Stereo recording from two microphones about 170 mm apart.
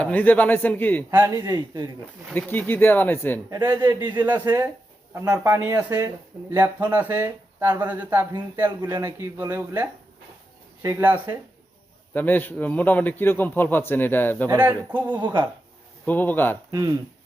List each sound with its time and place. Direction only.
0.0 s a man's voice: 10° left (ahead or behind)
1.1 s speech: 15° right (ahead or behind)
1.4 s speech: 25° right (ahead or behind)
2.3 s a man's voice: 10° left (ahead or behind)
3.5 s speech: 25° right (ahead or behind)
12.1 s a man's voice: 10° left (ahead or behind)
14.8 s speech: 10° right (ahead or behind)
15.1 s speech: 25° right (ahead or behind)
16.0 s a man's voice: 10° left (ahead or behind)